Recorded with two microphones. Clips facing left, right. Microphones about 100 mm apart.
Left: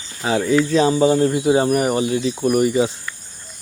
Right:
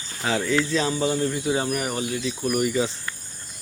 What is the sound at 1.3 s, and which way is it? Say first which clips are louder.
Speech: left 8 dB; 55° left (ahead or behind).